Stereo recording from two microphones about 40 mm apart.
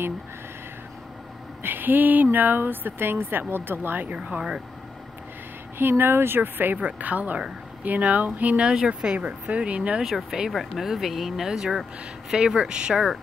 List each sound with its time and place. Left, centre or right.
1.6 s speech: right
4.1 s speech: right
5.8 s speech: right
6.8 s speech: right
10.0 s speech: centre